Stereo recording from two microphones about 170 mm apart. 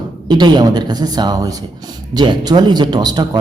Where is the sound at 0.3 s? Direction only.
25° right (ahead or behind).